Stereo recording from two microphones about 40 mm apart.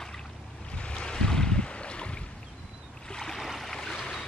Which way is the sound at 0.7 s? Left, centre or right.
Left.